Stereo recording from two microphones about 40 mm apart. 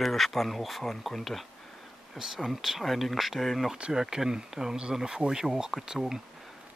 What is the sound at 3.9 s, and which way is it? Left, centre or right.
Speech, centre.